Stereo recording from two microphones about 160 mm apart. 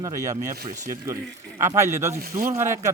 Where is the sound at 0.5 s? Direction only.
70° right (ahead or behind).